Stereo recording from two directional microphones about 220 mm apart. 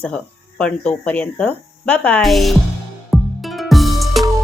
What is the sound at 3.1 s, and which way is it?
Music, centre (ahead or behind).